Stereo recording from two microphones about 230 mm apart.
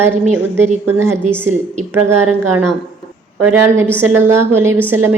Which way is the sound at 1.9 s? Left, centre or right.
Right.